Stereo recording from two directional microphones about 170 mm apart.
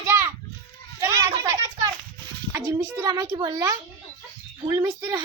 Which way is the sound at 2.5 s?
15° right (ahead or behind).